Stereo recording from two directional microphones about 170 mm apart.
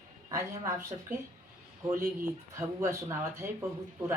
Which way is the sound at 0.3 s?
15° right (ahead or behind).